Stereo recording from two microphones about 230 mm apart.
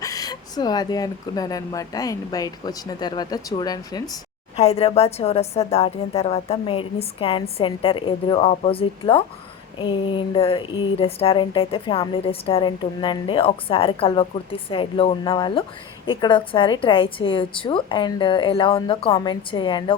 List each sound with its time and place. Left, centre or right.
0.0 s speech: centre
4.5 s speech: left